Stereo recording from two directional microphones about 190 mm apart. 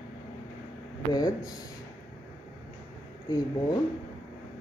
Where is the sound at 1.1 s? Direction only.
20° left (ahead or behind).